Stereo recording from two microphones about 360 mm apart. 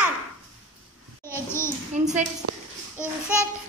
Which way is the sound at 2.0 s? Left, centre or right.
Centre.